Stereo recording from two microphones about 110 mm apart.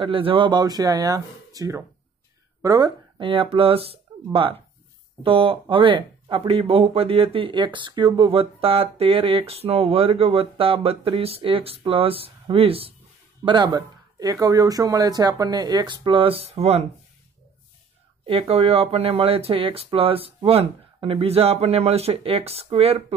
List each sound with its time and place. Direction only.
0.0 s speech: 55° right (ahead or behind); by 2.9 s 30° right (ahead or behind)
3.2 s speech: 55° right (ahead or behind)
13.5 s speech: 40° right (ahead or behind); by 16.8 s 70° right (ahead or behind)
18.2 s speech: 60° right (ahead or behind)